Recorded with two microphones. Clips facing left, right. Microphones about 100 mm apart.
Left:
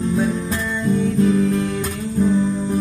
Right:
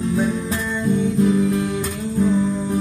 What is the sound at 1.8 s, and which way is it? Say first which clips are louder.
Music: left 1 dB; centre (ahead or behind).